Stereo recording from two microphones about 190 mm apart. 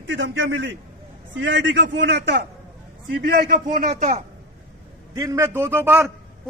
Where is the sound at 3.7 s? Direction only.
40° right (ahead or behind).